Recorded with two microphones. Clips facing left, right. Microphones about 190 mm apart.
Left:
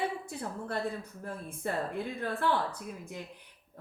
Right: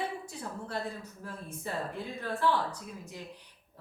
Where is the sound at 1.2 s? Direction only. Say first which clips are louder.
Left 4 dB; 55° left (ahead or behind).